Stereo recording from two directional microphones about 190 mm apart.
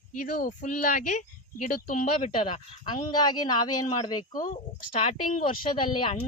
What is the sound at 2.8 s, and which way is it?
Speech, 25° left (ahead or behind).